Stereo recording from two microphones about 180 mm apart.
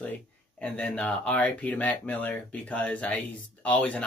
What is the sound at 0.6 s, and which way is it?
Speech, 5° left (ahead or behind).